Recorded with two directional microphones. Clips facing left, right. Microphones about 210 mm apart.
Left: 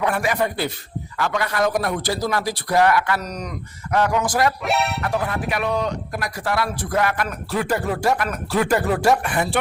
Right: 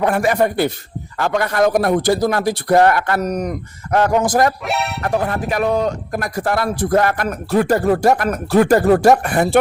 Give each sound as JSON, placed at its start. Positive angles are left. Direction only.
{"t": 0.0, "sound": "speech", "side_deg": -45}
{"t": 4.6, "sound": "speech", "side_deg": 0}
{"t": 5.0, "sound": "speech", "side_deg": -45}